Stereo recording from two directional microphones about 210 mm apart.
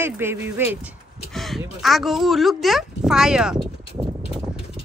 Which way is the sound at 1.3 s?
Centre (ahead or behind).